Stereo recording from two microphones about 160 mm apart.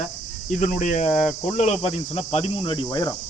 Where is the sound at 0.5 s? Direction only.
50° left (ahead or behind); by 3.2 s 25° left (ahead or behind).